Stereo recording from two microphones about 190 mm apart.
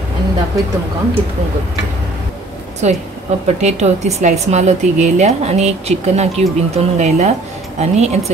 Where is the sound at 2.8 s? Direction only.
40° right (ahead or behind).